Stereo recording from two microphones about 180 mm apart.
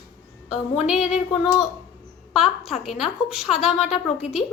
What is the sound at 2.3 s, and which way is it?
A woman's voice, centre (ahead or behind).